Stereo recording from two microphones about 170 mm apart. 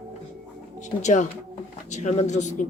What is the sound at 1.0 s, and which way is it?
Speech, 45° left (ahead or behind).